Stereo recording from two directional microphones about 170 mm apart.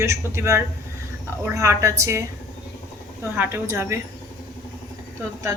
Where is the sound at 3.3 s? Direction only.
15° right (ahead or behind).